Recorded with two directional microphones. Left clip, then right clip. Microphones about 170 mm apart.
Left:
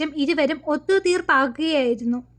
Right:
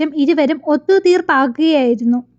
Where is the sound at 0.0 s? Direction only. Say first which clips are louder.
Right 7 dB; 30° right (ahead or behind).